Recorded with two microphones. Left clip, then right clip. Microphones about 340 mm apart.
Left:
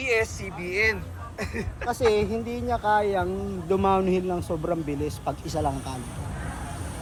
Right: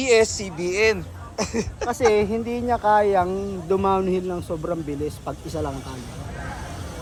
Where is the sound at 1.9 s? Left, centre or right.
Right.